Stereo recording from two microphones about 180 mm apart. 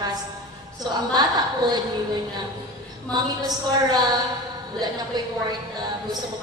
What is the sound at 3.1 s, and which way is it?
A woman's voice, 20° right (ahead or behind).